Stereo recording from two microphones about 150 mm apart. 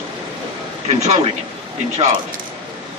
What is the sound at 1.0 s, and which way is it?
Speech, 50° right (ahead or behind).